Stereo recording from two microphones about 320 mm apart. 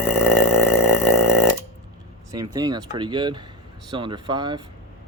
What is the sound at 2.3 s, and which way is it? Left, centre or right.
Speech, centre.